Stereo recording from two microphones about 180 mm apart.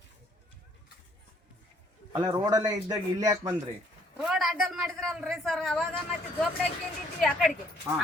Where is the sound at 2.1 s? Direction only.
25° right (ahead or behind).